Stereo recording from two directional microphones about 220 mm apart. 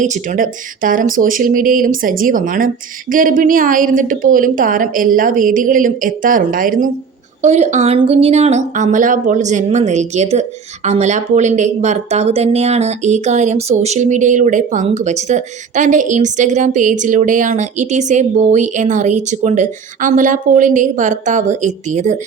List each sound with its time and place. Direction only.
0.0 s speech: 35° right (ahead or behind)